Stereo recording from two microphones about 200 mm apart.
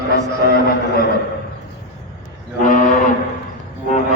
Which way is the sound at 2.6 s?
40° left (ahead or behind).